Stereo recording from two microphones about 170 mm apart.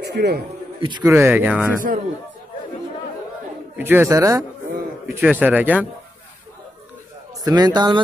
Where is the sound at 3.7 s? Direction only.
10° right (ahead or behind).